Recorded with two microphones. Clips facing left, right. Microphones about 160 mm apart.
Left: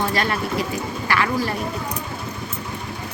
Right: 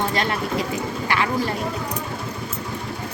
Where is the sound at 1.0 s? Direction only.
20° right (ahead or behind).